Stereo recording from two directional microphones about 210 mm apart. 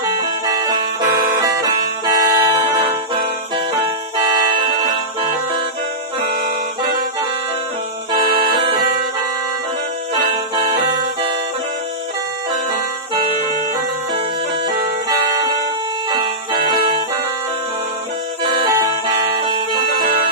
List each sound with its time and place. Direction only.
1.4 s music: 20° right (ahead or behind)
8.4 s music: 25° right (ahead or behind)
10.2 s music: 25° right (ahead or behind)
18.4 s music: 20° right (ahead or behind)